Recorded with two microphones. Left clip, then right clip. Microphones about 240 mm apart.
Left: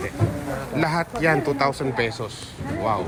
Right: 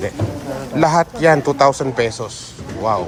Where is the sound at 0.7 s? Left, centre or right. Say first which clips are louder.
Right 10 dB; centre.